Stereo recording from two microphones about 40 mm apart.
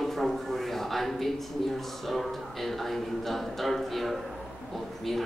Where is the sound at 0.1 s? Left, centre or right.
Centre.